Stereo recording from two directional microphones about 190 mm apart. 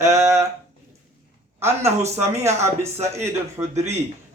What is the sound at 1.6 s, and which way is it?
Speech, 15° right (ahead or behind).